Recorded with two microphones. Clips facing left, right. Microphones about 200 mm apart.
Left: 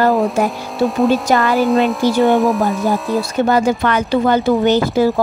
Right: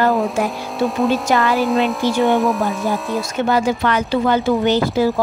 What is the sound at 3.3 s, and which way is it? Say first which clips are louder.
A woman's voice: left 3 dB; 45° left (ahead or behind).